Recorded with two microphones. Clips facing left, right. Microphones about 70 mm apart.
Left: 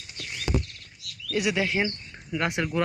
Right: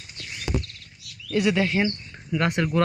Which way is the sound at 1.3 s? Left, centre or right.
Centre.